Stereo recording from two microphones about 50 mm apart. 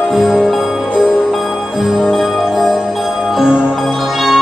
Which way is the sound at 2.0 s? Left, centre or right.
Centre.